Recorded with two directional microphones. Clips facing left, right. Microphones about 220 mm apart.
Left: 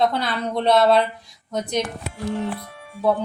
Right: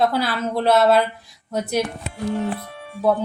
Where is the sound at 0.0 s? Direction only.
5° right (ahead or behind).